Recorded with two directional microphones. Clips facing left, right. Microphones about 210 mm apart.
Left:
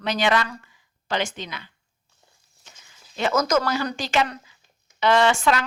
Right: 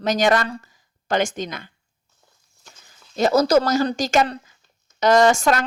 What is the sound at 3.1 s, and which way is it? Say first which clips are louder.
A woman's voice: right 5 dB; 35° right (ahead or behind).